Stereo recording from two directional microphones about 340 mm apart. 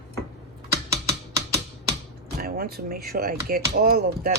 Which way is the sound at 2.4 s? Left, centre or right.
Right.